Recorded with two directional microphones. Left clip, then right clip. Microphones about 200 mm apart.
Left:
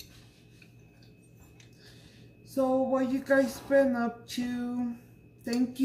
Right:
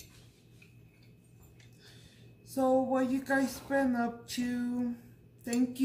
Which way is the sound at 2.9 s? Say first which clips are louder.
Left 4 dB; 10° right (ahead or behind).